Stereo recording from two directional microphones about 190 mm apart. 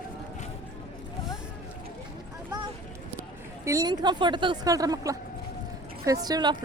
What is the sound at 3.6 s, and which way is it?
A woman's voice, 20° right (ahead or behind).